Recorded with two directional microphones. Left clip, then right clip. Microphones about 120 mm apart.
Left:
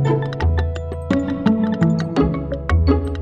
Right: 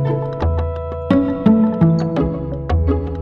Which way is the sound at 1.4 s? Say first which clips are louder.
Right 4 dB; centre (ahead or behind).